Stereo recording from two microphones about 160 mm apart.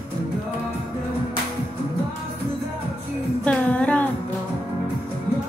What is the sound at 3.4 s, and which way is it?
Music, 10° left (ahead or behind).